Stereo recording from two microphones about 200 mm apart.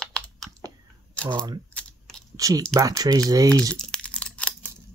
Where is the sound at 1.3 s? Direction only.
20° right (ahead or behind).